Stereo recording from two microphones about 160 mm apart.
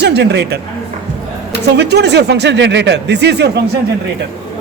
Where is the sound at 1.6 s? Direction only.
90° right.